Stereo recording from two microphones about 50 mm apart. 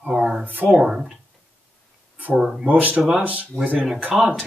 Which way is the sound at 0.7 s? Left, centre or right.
Centre.